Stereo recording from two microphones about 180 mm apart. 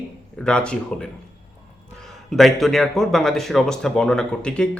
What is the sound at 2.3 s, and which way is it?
Speech, centre (ahead or behind).